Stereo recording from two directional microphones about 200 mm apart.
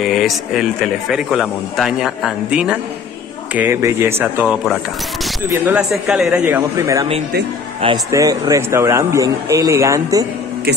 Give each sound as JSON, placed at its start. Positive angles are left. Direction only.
{"t": 0.0, "sound": "a man's voice", "side_deg": 0}